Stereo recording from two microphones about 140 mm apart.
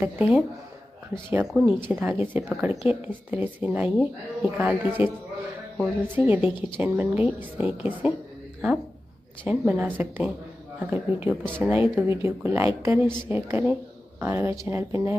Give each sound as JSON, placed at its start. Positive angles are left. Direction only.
{"t": 0.0, "sound": "a woman's voice", "side_deg": -10}
{"t": 9.5, "sound": "a woman's voice", "side_deg": -10}